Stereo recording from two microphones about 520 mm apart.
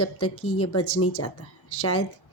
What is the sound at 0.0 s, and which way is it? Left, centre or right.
A woman's voice, left.